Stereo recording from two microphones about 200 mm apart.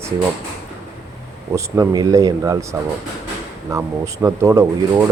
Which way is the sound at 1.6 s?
15° right (ahead or behind).